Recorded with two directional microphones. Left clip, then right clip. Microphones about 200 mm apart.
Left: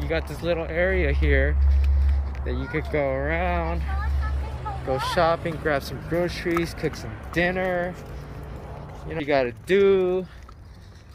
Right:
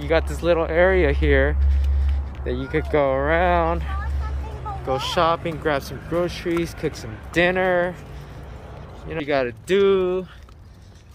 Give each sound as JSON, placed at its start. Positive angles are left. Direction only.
{"t": 0.0, "sound": "speech", "side_deg": -15}
{"t": 4.8, "sound": "speech", "side_deg": -5}
{"t": 9.1, "sound": "speech", "side_deg": 0}